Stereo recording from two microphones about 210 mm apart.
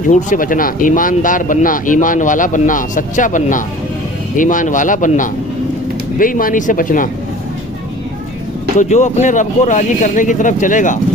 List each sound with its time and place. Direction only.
0.1 s speech: 35° left (ahead or behind)
8.8 s speech: 35° left (ahead or behind)